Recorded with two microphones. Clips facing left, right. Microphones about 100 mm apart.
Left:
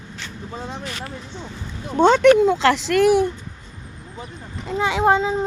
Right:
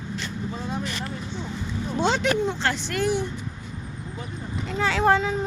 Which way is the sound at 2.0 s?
55° left (ahead or behind).